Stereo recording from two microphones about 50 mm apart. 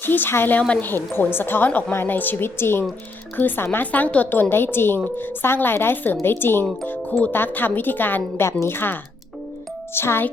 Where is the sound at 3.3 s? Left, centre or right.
Left.